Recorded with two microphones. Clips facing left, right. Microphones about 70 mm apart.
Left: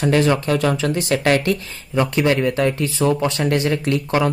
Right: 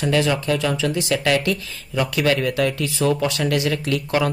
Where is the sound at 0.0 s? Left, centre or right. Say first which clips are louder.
Left 3 dB; left.